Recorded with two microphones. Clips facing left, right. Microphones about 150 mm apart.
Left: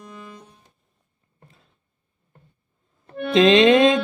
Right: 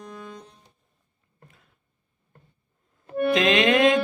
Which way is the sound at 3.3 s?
25° left (ahead or behind).